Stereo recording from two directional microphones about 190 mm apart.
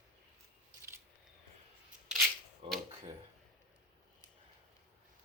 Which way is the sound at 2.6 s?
30° right (ahead or behind).